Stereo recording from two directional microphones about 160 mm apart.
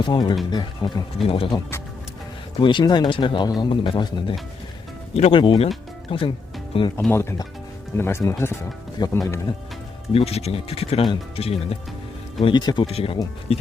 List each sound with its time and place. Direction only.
0.0 s speech: 25° left (ahead or behind)
2.6 s speech: 30° left (ahead or behind)
7.1 s speech: 15° left (ahead or behind)
10.1 s speech: 40° left (ahead or behind)